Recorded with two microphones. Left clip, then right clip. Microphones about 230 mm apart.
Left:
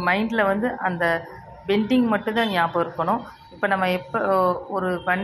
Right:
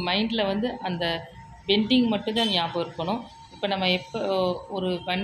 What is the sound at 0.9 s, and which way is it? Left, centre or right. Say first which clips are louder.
Speech: left 6 dB; left.